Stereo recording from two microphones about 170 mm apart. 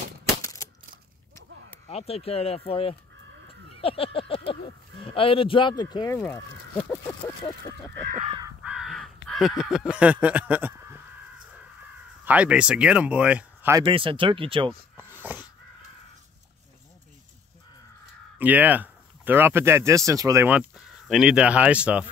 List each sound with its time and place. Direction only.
0.4 s a sound: 20° left (ahead or behind)
1.9 s speech: 35° left (ahead or behind)
6.1 s speech: 15° left (ahead or behind)
6.8 s a sound: 25° left (ahead or behind)
8.6 s crow: centre (ahead or behind)
12.3 s speech: 5° right (ahead or behind)
13.8 s speech: 30° right (ahead or behind)
15.0 s a sound: 10° right (ahead or behind)
18.4 s speech: 10° right (ahead or behind)
20.4 s speech: 5° right (ahead or behind)